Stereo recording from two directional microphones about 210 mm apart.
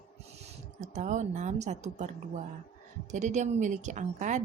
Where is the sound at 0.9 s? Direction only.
35° right (ahead or behind).